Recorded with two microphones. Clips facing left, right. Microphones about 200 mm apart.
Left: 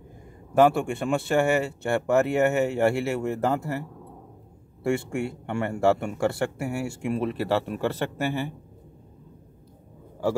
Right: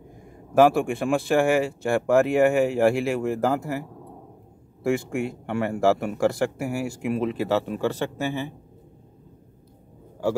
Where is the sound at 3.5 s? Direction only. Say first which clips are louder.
Right 1 dB; 10° right (ahead or behind).